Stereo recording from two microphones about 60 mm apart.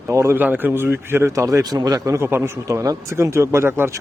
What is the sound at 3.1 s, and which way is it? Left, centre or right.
Speech, right.